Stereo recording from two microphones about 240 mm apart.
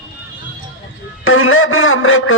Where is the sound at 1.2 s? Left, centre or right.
Left.